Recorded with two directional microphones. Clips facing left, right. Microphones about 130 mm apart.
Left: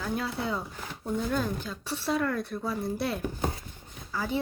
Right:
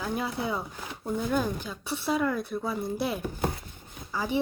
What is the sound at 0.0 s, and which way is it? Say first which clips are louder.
Speech: right 1 dB; 15° right (ahead or behind).